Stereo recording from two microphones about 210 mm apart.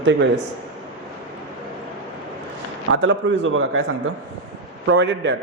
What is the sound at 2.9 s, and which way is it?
Speech, 60° right (ahead or behind).